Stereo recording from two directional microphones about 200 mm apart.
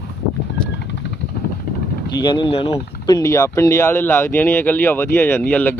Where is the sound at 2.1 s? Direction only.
20° left (ahead or behind).